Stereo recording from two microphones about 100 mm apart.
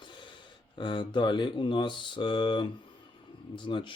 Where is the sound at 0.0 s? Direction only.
50° left (ahead or behind).